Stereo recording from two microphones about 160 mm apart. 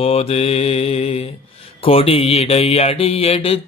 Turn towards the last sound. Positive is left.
turn(degrees=35)  # may be behind; listen again after turning